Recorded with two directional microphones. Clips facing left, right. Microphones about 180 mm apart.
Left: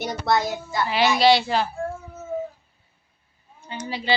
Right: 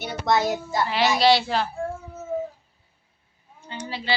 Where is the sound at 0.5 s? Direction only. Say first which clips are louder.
Right 1 dB; 45° right (ahead or behind).